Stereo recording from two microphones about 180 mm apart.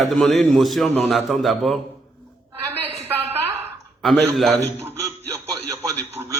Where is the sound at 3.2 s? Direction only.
35° right (ahead or behind).